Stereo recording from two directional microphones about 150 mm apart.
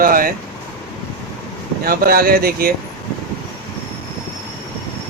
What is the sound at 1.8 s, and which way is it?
Speech, 85° right.